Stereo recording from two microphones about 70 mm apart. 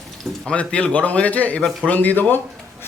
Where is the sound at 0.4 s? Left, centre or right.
Centre.